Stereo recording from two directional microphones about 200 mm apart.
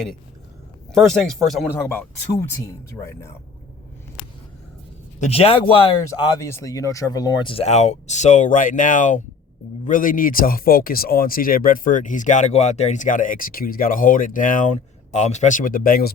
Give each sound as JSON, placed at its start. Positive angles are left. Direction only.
{"t": 0.9, "sound": "speech", "side_deg": 0}
{"t": 5.2, "sound": "speech", "side_deg": 30}